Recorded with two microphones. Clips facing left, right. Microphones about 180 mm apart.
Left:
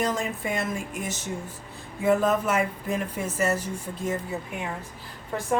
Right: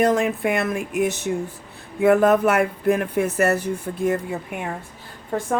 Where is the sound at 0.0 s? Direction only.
60° right (ahead or behind).